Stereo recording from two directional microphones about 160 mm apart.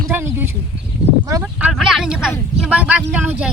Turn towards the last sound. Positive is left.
turn(degrees=-10)  # may be behind; listen again after turning